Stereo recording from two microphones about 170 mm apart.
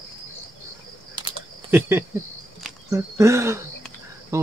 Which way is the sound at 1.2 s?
25° right (ahead or behind).